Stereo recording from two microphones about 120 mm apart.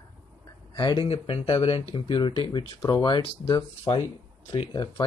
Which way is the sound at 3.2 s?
50° left (ahead or behind).